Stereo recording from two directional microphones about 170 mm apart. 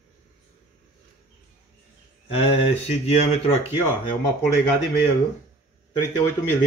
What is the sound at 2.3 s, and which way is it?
Speech, 35° left (ahead or behind).